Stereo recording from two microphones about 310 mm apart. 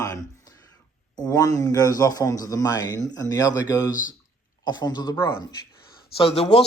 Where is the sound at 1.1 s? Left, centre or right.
Centre.